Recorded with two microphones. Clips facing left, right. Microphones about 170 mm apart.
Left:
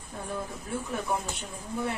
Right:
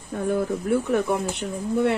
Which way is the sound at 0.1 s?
75° right (ahead or behind).